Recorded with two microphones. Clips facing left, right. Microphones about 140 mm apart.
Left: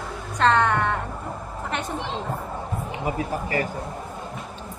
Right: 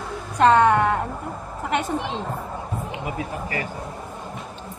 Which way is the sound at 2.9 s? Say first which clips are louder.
Left 6 dB; 35° left (ahead or behind).